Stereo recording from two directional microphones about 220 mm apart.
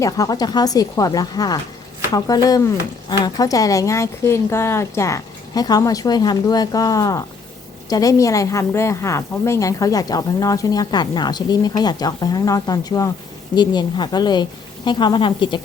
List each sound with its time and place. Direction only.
0.0 s a woman's voice: 15° left (ahead or behind)